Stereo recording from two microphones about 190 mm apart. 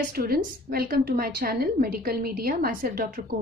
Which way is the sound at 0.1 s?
50° right (ahead or behind).